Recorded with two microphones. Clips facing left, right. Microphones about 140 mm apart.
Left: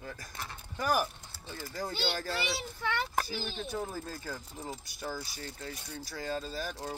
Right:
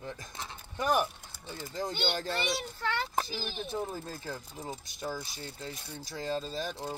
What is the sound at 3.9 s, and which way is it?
Speech, 20° right (ahead or behind).